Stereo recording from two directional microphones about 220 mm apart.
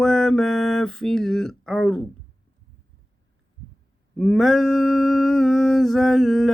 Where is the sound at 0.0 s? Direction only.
Centre (ahead or behind).